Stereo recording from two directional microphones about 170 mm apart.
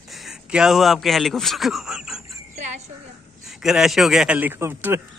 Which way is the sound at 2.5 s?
45° right (ahead or behind).